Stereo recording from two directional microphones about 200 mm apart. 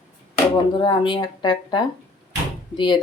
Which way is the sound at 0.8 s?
25° left (ahead or behind).